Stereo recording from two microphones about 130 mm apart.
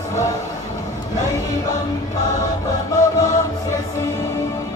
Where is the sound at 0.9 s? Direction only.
25° left (ahead or behind).